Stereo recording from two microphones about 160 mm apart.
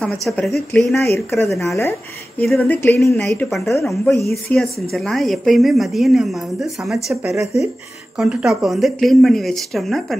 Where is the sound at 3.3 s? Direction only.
Centre (ahead or behind).